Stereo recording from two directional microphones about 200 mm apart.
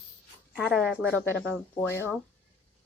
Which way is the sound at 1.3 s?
5° left (ahead or behind).